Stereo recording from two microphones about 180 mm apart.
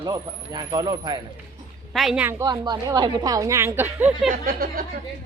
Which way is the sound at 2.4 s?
20° right (ahead or behind).